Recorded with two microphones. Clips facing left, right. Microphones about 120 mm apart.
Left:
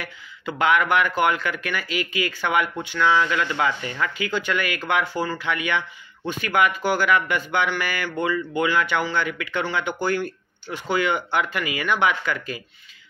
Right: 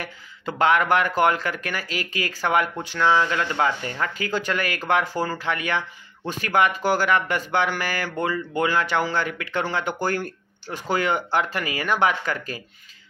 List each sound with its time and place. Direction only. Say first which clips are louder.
0.0 s speech: right 1 dB; 35° right (ahead or behind)